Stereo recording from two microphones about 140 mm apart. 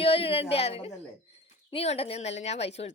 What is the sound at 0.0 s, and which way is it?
A woman's voice, 45° left (ahead or behind).